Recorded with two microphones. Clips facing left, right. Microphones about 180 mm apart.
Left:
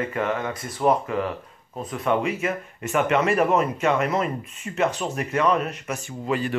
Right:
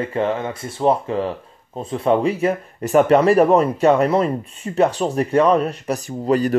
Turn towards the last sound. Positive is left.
turn(degrees=-40)  # may be behind; listen again after turning